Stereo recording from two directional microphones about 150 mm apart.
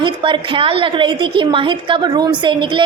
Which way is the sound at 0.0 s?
35° right (ahead or behind).